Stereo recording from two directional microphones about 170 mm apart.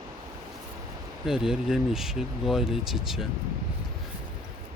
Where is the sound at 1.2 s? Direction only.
5° right (ahead or behind).